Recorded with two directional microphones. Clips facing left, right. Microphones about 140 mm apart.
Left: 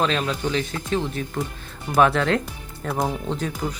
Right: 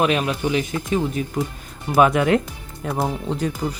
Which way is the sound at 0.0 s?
15° right (ahead or behind).